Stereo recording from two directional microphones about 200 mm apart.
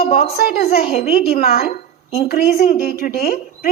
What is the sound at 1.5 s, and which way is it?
A woman's voice, 45° left (ahead or behind).